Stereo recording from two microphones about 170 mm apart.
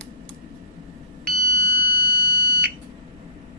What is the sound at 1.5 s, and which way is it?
Alarm, 25° left (ahead or behind).